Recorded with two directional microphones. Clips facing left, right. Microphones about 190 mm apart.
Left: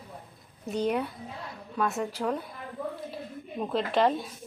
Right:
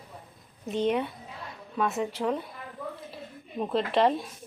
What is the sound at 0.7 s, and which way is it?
A woman's voice, centre (ahead or behind).